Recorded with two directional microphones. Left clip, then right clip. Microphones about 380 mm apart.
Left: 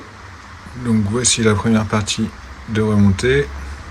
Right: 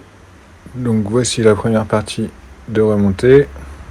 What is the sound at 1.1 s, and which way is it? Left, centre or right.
Speech, centre.